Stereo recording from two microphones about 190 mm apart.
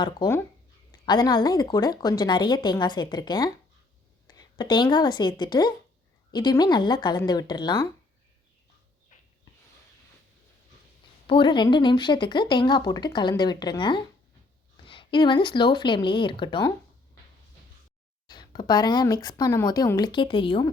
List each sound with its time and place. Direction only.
0.2 s a woman's voice: 25° left (ahead or behind)
11.3 s speech: 25° left (ahead or behind)
18.3 s speech: 20° left (ahead or behind)